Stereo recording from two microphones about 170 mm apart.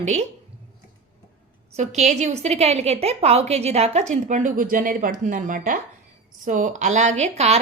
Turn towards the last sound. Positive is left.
turn(degrees=-40)  # may be behind; listen again after turning